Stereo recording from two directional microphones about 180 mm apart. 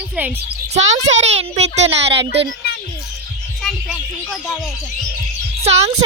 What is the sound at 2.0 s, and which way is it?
Speech, 75° right (ahead or behind).